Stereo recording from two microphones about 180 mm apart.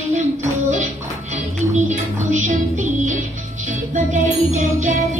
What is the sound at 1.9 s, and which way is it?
Music, 40° right (ahead or behind).